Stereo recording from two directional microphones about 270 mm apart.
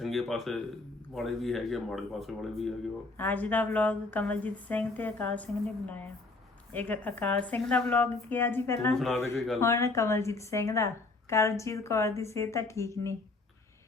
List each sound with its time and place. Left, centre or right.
0.0 s speech: centre
6.7 s speech: centre